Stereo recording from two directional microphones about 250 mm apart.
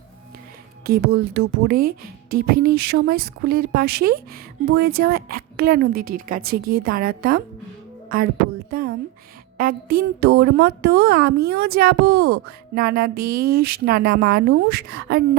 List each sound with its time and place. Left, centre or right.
0.9 s a woman's voice: right
1.8 s speech: right
2.5 s a woman's voice: right
8.7 s a sound: right
9.6 s a woman's voice: right
13.1 s speech: right
13.6 s a woman's voice: right